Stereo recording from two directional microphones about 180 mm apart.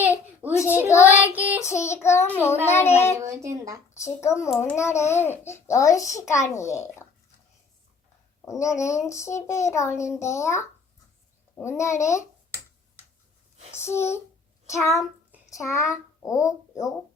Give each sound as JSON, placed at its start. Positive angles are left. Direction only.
{"t": 0.6, "sound": "child singing", "side_deg": 15}
{"t": 1.1, "sound": "child singing", "side_deg": -10}
{"t": 1.5, "sound": "child singing", "side_deg": 15}
{"t": 3.4, "sound": "speech", "side_deg": -15}
{"t": 3.9, "sound": "a child's voice", "side_deg": 15}
{"t": 4.4, "sound": "a child's voice", "side_deg": 0}
{"t": 4.8, "sound": "a child's voice", "side_deg": 15}
{"t": 8.4, "sound": "a child's voice", "side_deg": 15}
{"t": 13.7, "sound": "a child's voice", "side_deg": 15}